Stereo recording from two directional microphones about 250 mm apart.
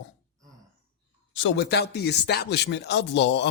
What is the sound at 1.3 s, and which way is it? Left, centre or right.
A man's voice, left.